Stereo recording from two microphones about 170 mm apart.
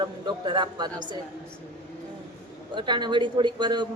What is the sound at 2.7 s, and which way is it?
A woman's voice, 25° right (ahead or behind).